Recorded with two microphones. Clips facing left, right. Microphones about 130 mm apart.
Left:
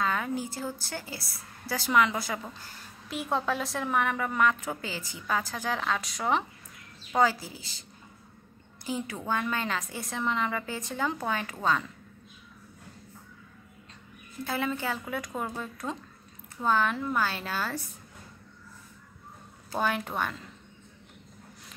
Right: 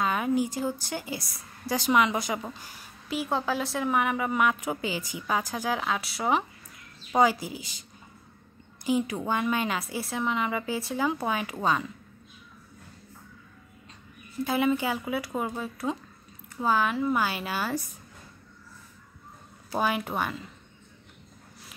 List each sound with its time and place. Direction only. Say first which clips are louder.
0.0 s a woman's voice: right 4 dB; 15° right (ahead or behind)
8.8 s a woman's voice: right 6 dB; 15° right (ahead or behind)
14.4 s a woman's voice: right 6 dB; 15° right (ahead or behind)
19.7 s a woman's voice: right 2 dB; 10° right (ahead or behind)